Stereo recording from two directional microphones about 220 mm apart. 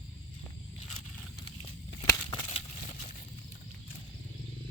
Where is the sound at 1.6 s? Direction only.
20° left (ahead or behind).